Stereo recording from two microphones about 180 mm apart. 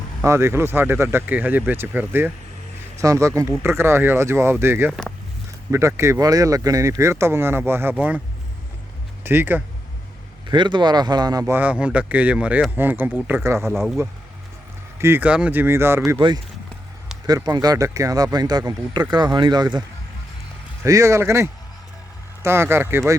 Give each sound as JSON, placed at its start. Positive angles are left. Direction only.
{"t": 0.3, "sound": "speech", "side_deg": -15}
{"t": 9.2, "sound": "speech", "side_deg": -10}
{"t": 10.4, "sound": "speech", "side_deg": -25}
{"t": 13.7, "sound": "speech", "side_deg": 0}
{"t": 14.9, "sound": "speech", "side_deg": -15}
{"t": 16.1, "sound": "speech", "side_deg": -25}
{"t": 20.8, "sound": "speech", "side_deg": -15}